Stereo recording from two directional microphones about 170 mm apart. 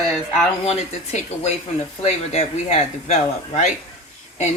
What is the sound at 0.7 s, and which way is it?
Speech, 40° left (ahead or behind).